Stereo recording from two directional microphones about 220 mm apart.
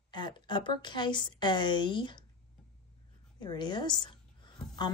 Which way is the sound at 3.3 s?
20° left (ahead or behind).